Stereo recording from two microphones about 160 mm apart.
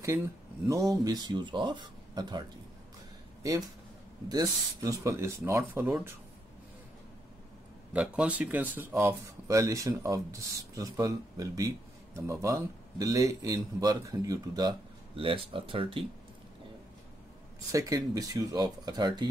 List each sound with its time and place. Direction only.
0.7 s speech: 20° right (ahead or behind)
4.3 s speech: 25° right (ahead or behind)
7.9 s speech: 10° right (ahead or behind); by 16.0 s 35° right (ahead or behind)
17.6 s speech: 20° right (ahead or behind)